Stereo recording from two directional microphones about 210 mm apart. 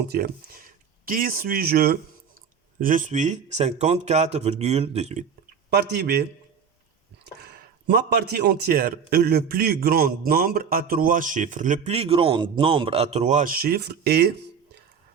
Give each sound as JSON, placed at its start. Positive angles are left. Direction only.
{"t": 0.1, "sound": "speech", "side_deg": -45}
{"t": 5.7, "sound": "a man's voice", "side_deg": -50}
{"t": 7.3, "sound": "a man's voice", "side_deg": -45}